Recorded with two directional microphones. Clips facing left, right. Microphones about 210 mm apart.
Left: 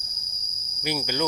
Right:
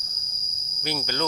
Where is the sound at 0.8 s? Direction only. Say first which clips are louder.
Left 2 dB; 10° left (ahead or behind).